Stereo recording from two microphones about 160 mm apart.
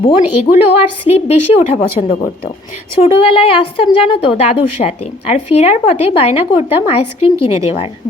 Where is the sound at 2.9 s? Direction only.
35° left (ahead or behind).